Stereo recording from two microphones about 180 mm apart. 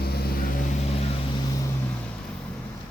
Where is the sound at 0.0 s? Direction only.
60° left (ahead or behind).